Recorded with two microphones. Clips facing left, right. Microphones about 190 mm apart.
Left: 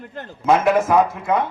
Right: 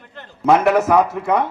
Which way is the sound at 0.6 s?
70° right (ahead or behind).